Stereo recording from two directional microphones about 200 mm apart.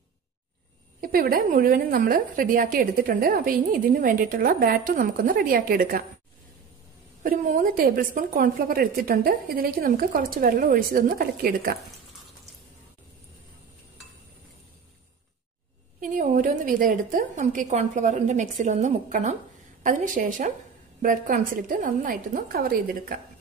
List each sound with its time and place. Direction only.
1.0 s a woman's voice: 45° right (ahead or behind)
7.2 s a woman's voice: 45° right (ahead or behind)
16.0 s a woman's voice: 40° right (ahead or behind)